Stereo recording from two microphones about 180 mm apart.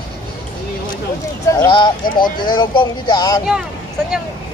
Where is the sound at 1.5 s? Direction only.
20° left (ahead or behind).